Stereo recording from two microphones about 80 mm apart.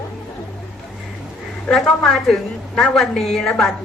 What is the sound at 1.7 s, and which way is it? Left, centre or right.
A woman's voice, centre.